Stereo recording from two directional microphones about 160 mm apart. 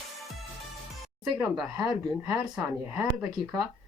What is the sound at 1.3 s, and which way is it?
Speech, 25° right (ahead or behind).